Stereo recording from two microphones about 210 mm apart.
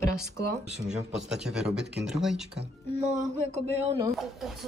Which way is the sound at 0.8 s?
Centre (ahead or behind).